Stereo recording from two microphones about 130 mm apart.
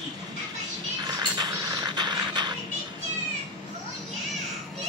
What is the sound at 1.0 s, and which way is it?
Music, 30° right (ahead or behind).